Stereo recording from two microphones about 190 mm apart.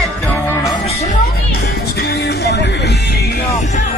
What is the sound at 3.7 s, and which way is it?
Music, 40° left (ahead or behind).